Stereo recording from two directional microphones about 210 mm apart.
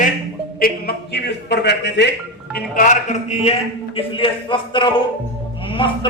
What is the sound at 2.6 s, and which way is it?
A man's voice, 40° left (ahead or behind).